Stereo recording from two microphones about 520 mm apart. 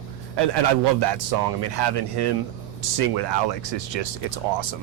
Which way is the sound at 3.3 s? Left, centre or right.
Right.